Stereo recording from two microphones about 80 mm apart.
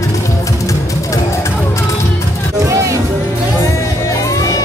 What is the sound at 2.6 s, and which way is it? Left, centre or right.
Music, right.